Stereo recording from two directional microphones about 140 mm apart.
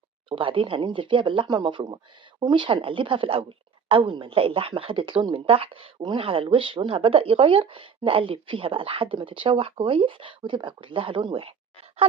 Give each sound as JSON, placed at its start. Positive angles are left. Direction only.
{"t": 0.3, "sound": "speech", "side_deg": -40}